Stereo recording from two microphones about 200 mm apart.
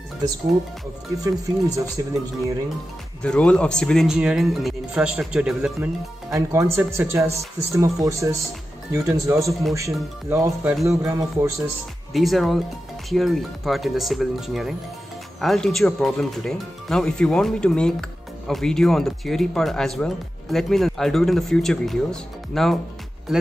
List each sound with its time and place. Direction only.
1.2 s speech: 15° right (ahead or behind)
3.2 s speech: 5° left (ahead or behind)
6.3 s speech: 15° right (ahead or behind)
9.5 s speech: centre (ahead or behind)
9.8 s speech: 15° right (ahead or behind)
12.1 s speech: centre (ahead or behind)